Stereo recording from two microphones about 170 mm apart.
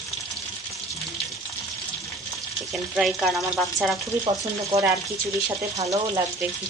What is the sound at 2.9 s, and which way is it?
Frying, centre (ahead or behind).